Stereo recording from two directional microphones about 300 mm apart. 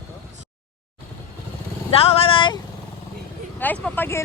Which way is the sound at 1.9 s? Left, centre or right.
Centre.